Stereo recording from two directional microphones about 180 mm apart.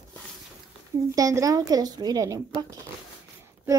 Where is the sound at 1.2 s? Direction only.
20° right (ahead or behind).